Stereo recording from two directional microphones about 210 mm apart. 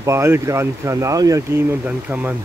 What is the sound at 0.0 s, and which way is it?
Speech, 15° right (ahead or behind).